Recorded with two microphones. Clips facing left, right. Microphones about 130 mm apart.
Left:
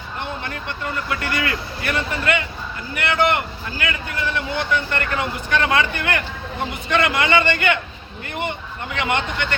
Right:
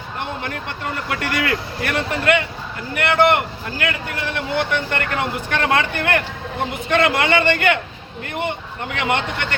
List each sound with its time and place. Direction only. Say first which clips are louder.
1.1 s speech: right 4 dB; 65° right (ahead or behind)
9.0 s speech: right 1 dB; 55° right (ahead or behind)